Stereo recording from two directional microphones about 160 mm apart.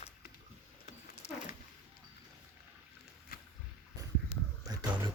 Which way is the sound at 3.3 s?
65° left (ahead or behind).